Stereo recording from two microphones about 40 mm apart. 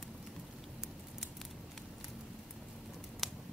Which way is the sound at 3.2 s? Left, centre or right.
Centre.